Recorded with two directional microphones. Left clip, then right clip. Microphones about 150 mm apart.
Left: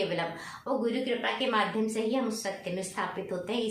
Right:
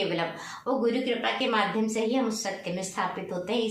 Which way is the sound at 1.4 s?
25° left (ahead or behind).